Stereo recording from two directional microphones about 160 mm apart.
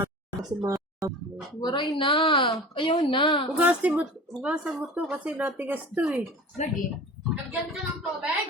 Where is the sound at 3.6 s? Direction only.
10° right (ahead or behind).